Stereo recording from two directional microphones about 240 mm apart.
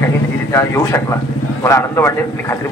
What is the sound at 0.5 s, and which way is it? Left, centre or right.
A man's voice, centre.